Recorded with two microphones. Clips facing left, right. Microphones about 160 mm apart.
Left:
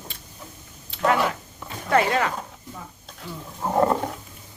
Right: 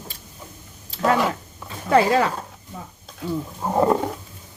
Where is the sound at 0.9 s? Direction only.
35° right (ahead or behind).